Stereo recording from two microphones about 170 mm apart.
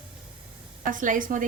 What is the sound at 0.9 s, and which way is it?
Speech, 50° right (ahead or behind).